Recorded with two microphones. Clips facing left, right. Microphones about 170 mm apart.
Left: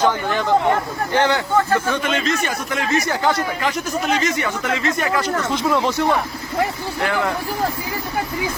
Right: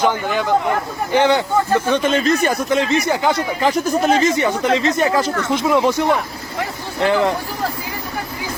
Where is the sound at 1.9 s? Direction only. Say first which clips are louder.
Right 5 dB; 35° right (ahead or behind).